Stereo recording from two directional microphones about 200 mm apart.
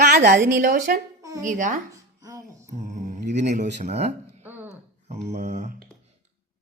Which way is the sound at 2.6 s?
40° right (ahead or behind).